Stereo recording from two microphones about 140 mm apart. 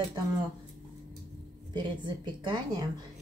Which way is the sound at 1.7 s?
30° right (ahead or behind).